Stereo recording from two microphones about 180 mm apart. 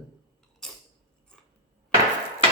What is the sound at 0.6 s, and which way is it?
Creak, 5° left (ahead or behind).